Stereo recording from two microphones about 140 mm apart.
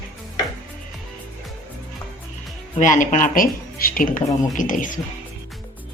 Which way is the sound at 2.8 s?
60° left (ahead or behind).